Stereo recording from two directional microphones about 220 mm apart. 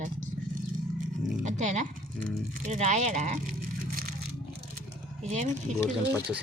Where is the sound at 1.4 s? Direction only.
35° right (ahead or behind).